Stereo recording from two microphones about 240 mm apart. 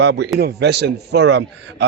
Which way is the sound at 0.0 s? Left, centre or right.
Right.